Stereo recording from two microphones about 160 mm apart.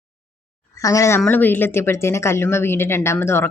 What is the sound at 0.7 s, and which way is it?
Speech, 20° left (ahead or behind).